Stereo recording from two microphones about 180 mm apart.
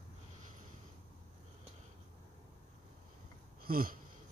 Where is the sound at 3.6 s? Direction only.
55° right (ahead or behind).